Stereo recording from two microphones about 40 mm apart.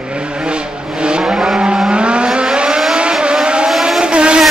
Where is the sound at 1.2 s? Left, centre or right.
Centre.